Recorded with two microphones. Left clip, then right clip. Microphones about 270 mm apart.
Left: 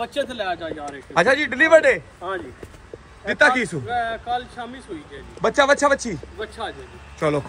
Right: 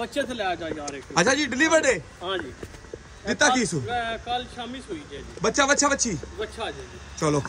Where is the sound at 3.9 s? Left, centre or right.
Centre.